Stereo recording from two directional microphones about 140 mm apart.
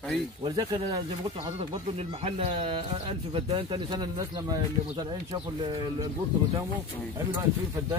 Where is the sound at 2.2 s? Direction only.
45° right (ahead or behind).